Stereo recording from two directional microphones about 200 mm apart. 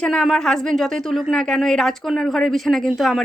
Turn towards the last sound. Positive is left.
turn(degrees=0)  # may be behind; listen again after turning